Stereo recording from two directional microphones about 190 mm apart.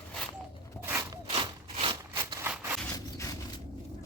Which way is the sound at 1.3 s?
30° right (ahead or behind).